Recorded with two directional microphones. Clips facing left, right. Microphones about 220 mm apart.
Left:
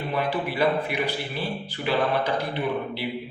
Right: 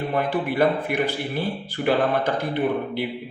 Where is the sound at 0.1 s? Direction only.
50° right (ahead or behind).